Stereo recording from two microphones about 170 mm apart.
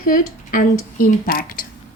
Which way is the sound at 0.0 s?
55° left (ahead or behind).